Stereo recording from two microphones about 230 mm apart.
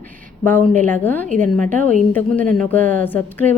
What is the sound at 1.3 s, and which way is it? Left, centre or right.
Speech, right.